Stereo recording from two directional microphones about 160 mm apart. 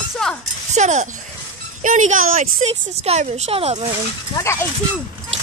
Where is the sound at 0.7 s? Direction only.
45° right (ahead or behind).